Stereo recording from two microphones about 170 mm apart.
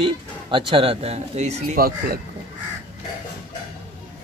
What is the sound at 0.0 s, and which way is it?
Speech, 30° right (ahead or behind).